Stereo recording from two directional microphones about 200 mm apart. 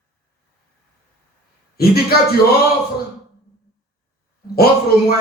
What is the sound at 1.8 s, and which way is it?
Speech, 50° left (ahead or behind).